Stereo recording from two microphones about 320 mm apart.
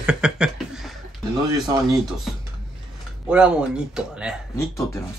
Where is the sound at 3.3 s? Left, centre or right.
Centre.